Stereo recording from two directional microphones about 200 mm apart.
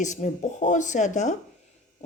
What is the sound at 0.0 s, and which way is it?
Speech, 35° left (ahead or behind).